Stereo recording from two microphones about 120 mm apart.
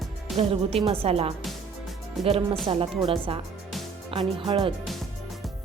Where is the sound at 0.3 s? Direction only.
55° right (ahead or behind).